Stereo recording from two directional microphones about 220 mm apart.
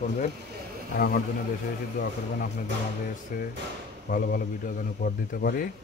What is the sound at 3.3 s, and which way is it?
Speech, 40° left (ahead or behind).